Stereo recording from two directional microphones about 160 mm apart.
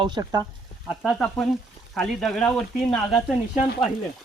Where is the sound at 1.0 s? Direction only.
Centre (ahead or behind).